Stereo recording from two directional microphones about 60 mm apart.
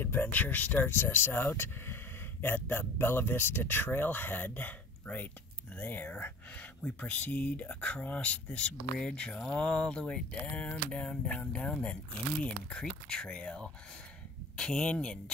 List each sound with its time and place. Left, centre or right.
0.0 s speech: left
5.8 s speech: left